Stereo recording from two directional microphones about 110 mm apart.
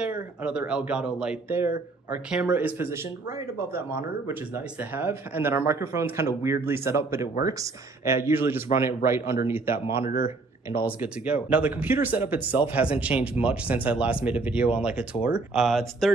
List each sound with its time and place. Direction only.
0.0 s speech: 10° right (ahead or behind)
1.5 s speech: 20° right (ahead or behind); by 16.1 s centre (ahead or behind)